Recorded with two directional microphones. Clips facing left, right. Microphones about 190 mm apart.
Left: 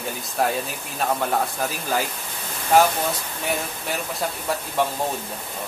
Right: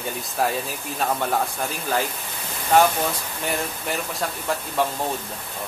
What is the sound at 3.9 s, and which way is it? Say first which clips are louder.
Speech: left 2 dB; centre (ahead or behind).